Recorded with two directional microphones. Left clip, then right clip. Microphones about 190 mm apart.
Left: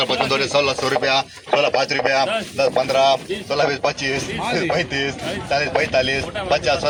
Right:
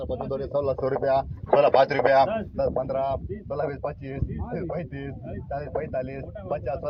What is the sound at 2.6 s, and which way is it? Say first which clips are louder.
Speech: left 10 dB; 5° right (ahead or behind).